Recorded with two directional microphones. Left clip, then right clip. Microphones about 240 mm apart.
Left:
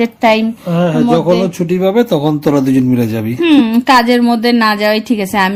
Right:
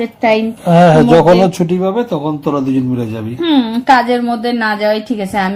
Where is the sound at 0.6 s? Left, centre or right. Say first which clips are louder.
Right 6 dB; right.